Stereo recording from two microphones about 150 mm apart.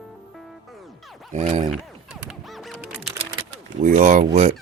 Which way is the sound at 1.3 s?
50° right (ahead or behind).